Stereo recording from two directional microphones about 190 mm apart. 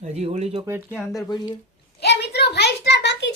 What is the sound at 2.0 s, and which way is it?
A child's voice, 60° left (ahead or behind).